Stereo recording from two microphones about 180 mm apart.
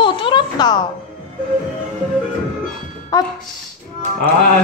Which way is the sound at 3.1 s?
20° left (ahead or behind).